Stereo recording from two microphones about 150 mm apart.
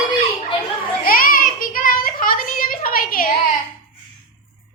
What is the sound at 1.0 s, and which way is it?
Child singing, 75° left (ahead or behind).